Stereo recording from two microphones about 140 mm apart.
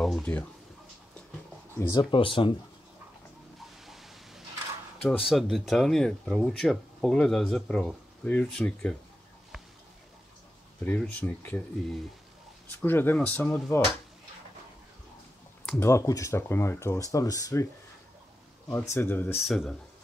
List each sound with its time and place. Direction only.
0.0 s speech: 5° left (ahead or behind)
1.8 s speech: 20° left (ahead or behind)
2.0 s speech: 35° left (ahead or behind)
3.8 s a sound: centre (ahead or behind)
5.0 s speech: centre (ahead or behind)
10.8 s speech: 10° left (ahead or behind)
12.7 s speech: 15° left (ahead or behind)
15.8 s speech: 20° left (ahead or behind)
18.7 s speech: 15° left (ahead or behind)
19.4 s speech: centre (ahead or behind)